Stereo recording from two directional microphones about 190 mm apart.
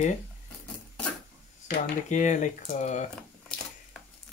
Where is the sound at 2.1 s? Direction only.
40° left (ahead or behind).